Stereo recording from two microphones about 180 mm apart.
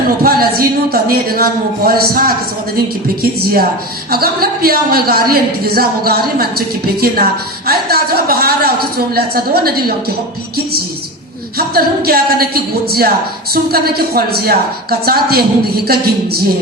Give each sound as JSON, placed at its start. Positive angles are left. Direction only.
{"t": 0.2, "sound": "a woman's voice", "side_deg": -55}
{"t": 4.1, "sound": "a woman's voice", "side_deg": -55}
{"t": 11.5, "sound": "a woman's voice", "side_deg": -55}
{"t": 13.5, "sound": "a woman's voice", "side_deg": -60}